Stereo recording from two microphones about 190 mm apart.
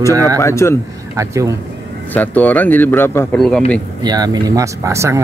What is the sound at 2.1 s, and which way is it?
Speech, 10° left (ahead or behind).